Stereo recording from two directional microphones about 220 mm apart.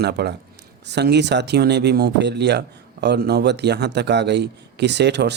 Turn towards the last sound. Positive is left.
turn(degrees=-50)  # may be behind; listen again after turning